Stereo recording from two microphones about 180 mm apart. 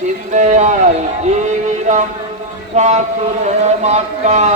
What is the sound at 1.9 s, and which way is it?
Speech, 45° right (ahead or behind).